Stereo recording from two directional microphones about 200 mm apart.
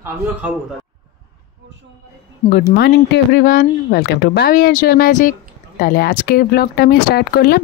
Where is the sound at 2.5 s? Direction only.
50° left (ahead or behind).